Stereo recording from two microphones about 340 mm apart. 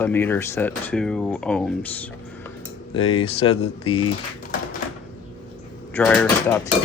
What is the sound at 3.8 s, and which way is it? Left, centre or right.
Speech, left.